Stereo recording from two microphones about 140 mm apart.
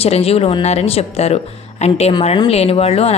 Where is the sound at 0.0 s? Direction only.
45° left (ahead or behind).